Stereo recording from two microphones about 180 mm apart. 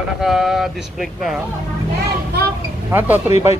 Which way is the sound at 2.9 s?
10° right (ahead or behind).